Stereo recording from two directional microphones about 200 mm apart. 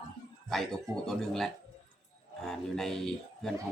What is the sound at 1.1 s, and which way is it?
Speech, centre (ahead or behind).